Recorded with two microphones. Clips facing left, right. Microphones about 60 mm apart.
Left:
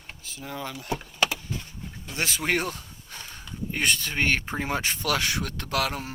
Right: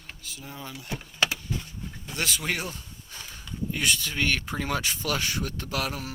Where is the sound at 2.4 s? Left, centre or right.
Left.